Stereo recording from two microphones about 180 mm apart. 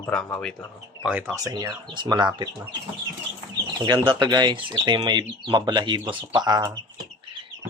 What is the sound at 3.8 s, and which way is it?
Speech, 25° right (ahead or behind).